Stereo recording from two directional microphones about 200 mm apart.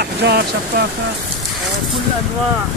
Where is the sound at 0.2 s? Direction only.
55° right (ahead or behind).